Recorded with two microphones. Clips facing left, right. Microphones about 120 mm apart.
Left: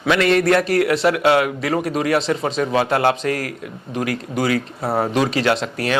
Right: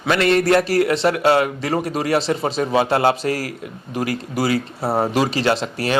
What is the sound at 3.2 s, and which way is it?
Speech, 55° left (ahead or behind).